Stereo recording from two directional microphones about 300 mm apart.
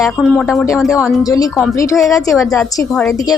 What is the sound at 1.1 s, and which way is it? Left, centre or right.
A woman's voice, centre.